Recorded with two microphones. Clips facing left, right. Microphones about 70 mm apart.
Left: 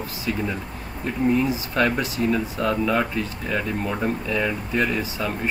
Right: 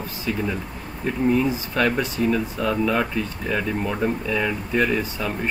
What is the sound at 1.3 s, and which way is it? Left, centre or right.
Speech, centre.